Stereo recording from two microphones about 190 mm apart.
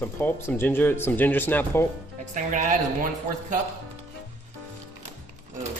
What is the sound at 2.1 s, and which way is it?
Speech, 40° right (ahead or behind).